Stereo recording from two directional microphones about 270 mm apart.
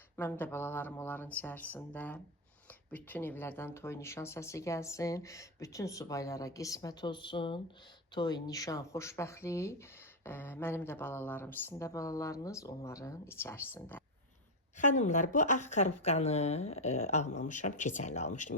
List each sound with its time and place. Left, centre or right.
0.2 s speech: centre
14.8 s speech: left